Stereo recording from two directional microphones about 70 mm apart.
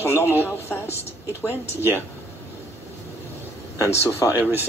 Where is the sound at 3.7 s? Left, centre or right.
Left.